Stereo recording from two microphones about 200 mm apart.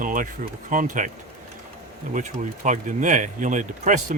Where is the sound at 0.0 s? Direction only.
40° right (ahead or behind).